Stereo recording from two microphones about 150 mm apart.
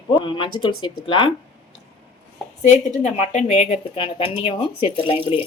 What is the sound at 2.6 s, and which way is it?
Speech, 50° left (ahead or behind).